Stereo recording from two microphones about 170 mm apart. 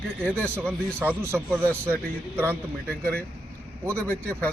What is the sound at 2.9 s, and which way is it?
A man's voice, 10° left (ahead or behind).